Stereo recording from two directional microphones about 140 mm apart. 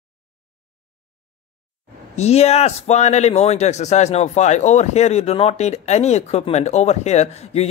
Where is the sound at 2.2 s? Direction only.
50° left (ahead or behind).